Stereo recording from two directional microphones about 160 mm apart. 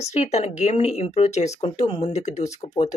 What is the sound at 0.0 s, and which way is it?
Speech, 45° left (ahead or behind).